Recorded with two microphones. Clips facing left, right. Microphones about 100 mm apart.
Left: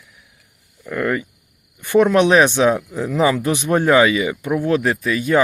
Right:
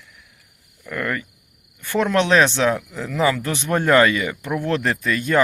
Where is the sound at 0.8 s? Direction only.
15° left (ahead or behind).